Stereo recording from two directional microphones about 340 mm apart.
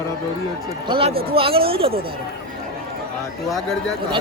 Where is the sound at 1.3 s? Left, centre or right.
Centre.